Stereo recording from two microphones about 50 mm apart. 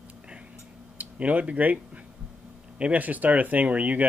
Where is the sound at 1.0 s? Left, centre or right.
Right.